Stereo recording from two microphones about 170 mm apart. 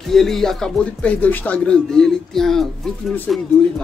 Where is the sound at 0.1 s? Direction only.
Centre (ahead or behind).